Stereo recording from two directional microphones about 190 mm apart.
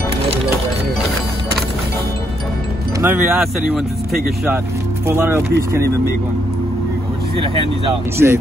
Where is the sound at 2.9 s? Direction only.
10° right (ahead or behind).